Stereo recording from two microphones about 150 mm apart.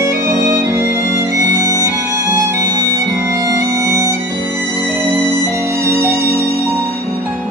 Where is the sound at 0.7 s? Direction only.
20° right (ahead or behind).